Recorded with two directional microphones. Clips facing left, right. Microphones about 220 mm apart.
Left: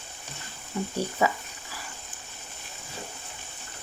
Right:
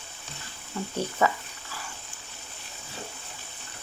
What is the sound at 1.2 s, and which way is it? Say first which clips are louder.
Speech: right 1 dB; 15° left (ahead or behind).